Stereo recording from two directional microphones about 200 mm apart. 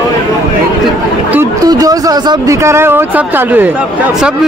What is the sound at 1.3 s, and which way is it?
Speech, 15° right (ahead or behind).